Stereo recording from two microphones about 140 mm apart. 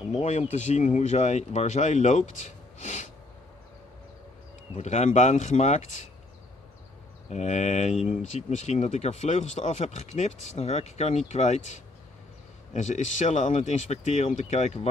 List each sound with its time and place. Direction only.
0.1 s speech: 50° left (ahead or behind)
4.7 s speech: 55° left (ahead or behind)
7.2 s speech: 55° left (ahead or behind)